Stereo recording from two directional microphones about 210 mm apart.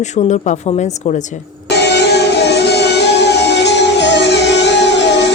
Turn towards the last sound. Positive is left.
turn(degrees=55)  # may be behind; listen again after turning